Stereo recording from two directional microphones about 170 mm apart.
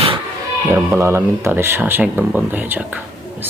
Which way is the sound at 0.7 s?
15° right (ahead or behind).